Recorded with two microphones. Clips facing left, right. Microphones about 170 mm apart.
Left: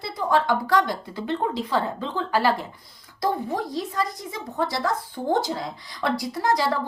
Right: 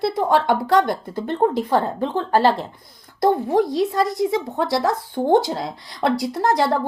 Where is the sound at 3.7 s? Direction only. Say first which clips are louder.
Right 7 dB; 75° right (ahead or behind).